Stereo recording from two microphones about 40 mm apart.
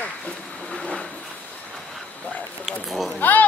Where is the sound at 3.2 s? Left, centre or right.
Left.